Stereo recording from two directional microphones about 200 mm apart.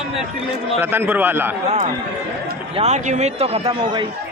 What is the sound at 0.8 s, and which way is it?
Speech, 10° right (ahead or behind).